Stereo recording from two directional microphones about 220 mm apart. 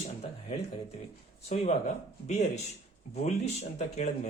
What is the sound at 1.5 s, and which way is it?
Speech, 30° left (ahead or behind).